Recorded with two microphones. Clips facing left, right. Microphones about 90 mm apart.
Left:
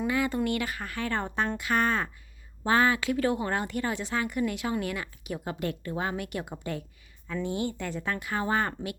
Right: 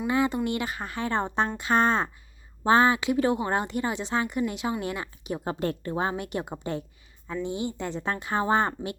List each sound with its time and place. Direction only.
0.1 s speech: 25° right (ahead or behind)